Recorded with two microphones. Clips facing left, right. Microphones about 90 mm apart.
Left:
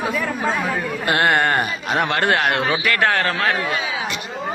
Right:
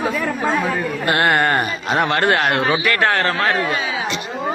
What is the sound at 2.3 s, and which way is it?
Speech, 15° left (ahead or behind).